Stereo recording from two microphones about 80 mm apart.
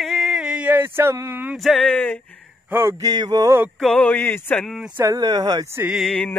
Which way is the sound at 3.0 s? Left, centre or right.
Right.